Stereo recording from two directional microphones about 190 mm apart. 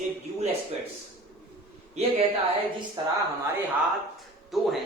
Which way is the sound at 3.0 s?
20° right (ahead or behind).